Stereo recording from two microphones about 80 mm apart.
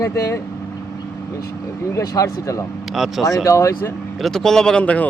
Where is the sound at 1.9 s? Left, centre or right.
Left.